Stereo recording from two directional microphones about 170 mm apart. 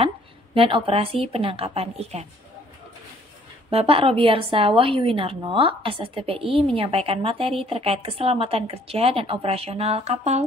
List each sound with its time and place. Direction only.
0.6 s a woman's voice: 30° right (ahead or behind)
3.7 s a woman's voice: 35° right (ahead or behind)